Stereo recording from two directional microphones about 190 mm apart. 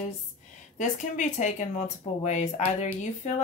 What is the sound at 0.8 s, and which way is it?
Speech, 40° left (ahead or behind).